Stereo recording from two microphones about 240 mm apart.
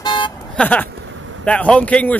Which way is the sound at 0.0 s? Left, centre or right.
Centre.